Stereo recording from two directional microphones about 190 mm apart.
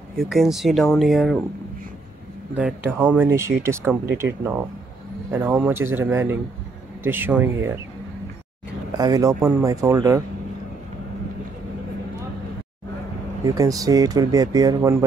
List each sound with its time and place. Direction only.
0.2 s speech: centre (ahead or behind)
2.5 s speech: 10° right (ahead or behind)
8.9 s speech: 20° right (ahead or behind)
13.6 s speech: 20° right (ahead or behind)